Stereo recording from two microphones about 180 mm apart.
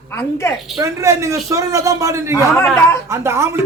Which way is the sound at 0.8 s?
15° right (ahead or behind).